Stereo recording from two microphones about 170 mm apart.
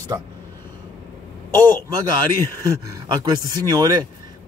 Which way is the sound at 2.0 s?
25° right (ahead or behind).